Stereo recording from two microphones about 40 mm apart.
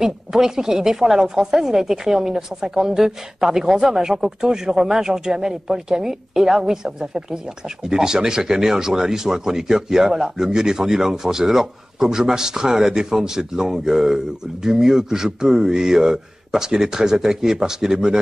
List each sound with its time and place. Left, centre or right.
0.0 s speech: centre